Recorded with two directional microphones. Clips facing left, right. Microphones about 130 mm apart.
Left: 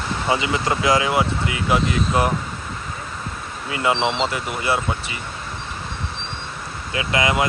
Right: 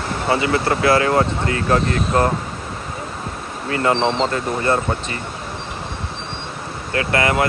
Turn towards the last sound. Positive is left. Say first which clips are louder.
# right 2 dB
turn(degrees=15)  # may be behind; listen again after turning